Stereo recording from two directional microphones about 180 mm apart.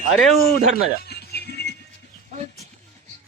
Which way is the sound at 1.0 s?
60° left (ahead or behind).